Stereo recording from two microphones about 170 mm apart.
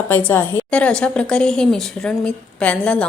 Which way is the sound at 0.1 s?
10° left (ahead or behind).